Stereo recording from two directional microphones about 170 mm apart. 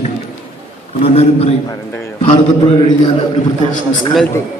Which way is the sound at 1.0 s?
35° left (ahead or behind).